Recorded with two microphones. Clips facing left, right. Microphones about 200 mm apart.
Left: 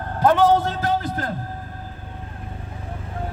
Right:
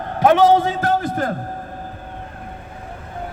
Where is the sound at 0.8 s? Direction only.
50° right (ahead or behind).